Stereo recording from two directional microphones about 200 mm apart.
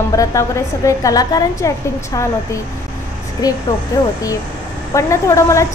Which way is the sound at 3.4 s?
20° left (ahead or behind).